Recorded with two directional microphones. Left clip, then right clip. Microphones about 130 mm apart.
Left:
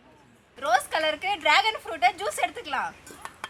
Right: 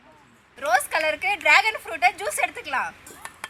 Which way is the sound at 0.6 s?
5° right (ahead or behind).